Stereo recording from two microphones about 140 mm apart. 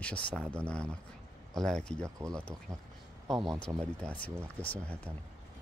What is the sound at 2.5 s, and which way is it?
Speech, 25° right (ahead or behind).